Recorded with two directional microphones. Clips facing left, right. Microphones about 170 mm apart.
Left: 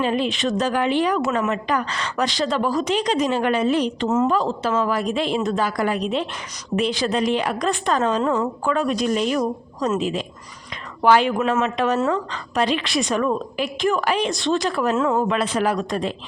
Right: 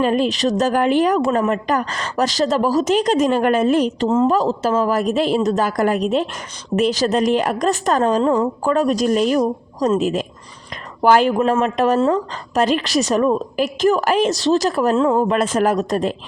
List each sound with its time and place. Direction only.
0.0 s a woman's voice: 45° right (ahead or behind)
4.1 s speech: 30° right (ahead or behind)
4.4 s a woman's voice: 40° right (ahead or behind)
11.3 s speech: 30° right (ahead or behind)
11.6 s a woman's voice: 45° right (ahead or behind)
14.9 s speech: 30° right (ahead or behind)
15.3 s a woman's voice: 45° right (ahead or behind)